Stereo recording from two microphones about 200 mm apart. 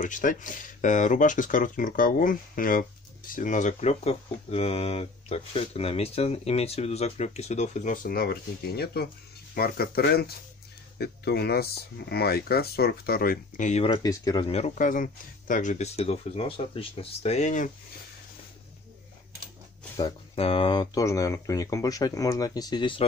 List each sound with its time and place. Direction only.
0.0 s speech: 40° left (ahead or behind); by 14.4 s 20° left (ahead or behind)
14.5 s speech: 35° left (ahead or behind)
20.0 s speech: 30° left (ahead or behind)